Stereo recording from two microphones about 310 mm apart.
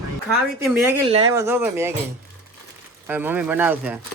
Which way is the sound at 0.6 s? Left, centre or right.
Centre.